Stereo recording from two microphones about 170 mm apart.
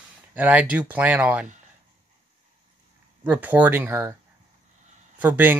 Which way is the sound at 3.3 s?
10° right (ahead or behind).